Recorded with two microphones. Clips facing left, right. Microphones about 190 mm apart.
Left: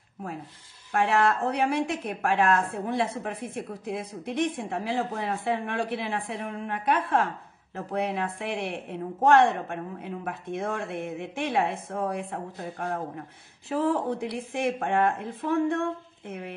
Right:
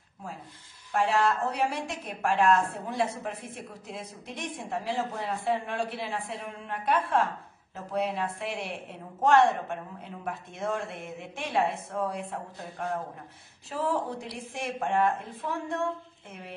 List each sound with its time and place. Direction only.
0.9 s a woman's voice: 60° left (ahead or behind)